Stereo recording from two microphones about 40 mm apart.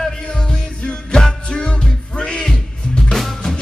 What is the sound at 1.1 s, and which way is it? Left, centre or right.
Music, left.